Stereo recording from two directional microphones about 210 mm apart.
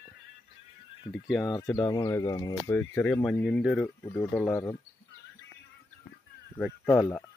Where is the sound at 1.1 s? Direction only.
Centre (ahead or behind).